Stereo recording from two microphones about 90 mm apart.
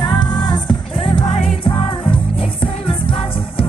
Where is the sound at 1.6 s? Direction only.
85° left.